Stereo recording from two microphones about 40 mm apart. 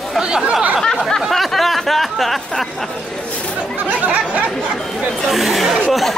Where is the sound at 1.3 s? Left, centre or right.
Centre.